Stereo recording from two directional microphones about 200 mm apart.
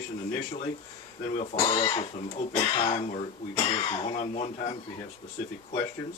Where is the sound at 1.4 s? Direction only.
25° left (ahead or behind).